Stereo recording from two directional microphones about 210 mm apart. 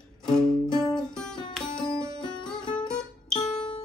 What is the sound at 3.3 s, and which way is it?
Music, 25° left (ahead or behind).